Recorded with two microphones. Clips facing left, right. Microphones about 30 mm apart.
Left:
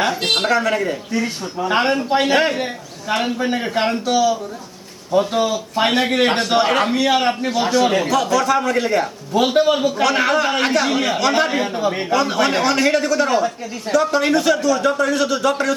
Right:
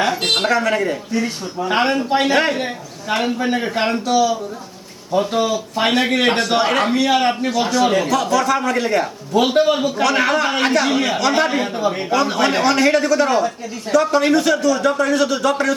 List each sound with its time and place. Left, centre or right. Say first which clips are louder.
0.0 s a man's voice: right 1 dB; centre